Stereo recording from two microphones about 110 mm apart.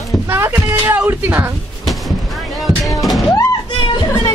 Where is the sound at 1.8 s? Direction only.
Centre (ahead or behind).